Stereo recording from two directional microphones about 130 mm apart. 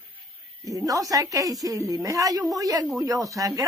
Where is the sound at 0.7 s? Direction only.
25° right (ahead or behind).